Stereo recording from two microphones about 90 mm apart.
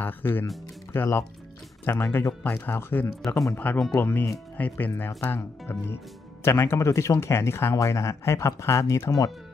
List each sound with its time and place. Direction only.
0.0 s speech: 25° left (ahead or behind)